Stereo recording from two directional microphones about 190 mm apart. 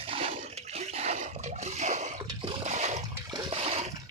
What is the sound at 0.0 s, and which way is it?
Water, 30° right (ahead or behind).